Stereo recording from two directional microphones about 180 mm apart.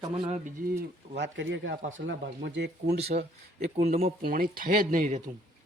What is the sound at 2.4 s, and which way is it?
Speech, 75° right (ahead or behind).